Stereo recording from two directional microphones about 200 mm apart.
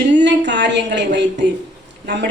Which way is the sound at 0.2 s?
60° right (ahead or behind).